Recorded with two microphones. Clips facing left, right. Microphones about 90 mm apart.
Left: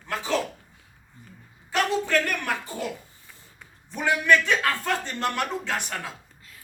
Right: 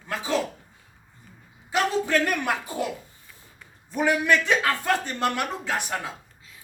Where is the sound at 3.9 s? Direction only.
15° right (ahead or behind).